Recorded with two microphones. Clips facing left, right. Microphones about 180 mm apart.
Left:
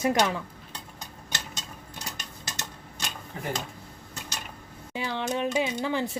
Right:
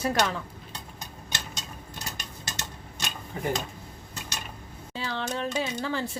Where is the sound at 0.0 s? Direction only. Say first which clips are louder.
Left 2 dB; 15° left (ahead or behind).